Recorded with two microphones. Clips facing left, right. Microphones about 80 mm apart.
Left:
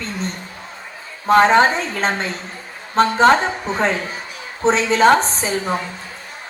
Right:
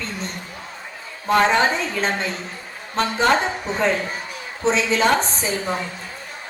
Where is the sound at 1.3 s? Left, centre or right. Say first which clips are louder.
Left 5 dB; left.